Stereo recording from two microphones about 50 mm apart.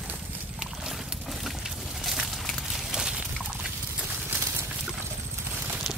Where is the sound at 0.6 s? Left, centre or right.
Centre.